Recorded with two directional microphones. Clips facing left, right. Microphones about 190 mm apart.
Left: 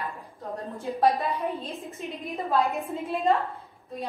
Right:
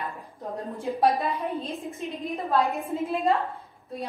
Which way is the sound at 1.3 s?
Centre (ahead or behind).